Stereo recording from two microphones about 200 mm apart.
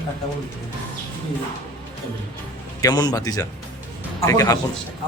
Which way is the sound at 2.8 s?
20° left (ahead or behind).